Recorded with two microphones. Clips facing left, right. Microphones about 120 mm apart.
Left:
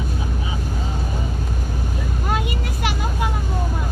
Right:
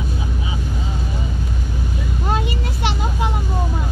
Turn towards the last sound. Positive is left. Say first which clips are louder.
# right 2 dB
turn(degrees=-25)  # may be behind; listen again after turning